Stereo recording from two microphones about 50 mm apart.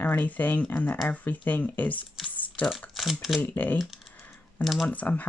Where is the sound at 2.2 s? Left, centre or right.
Left.